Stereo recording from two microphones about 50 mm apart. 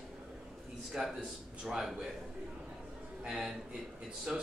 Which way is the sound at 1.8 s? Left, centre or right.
Centre.